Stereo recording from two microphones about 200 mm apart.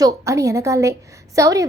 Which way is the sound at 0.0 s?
15° right (ahead or behind).